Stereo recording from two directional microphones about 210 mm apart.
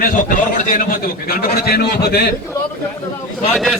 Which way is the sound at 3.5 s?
Centre (ahead or behind).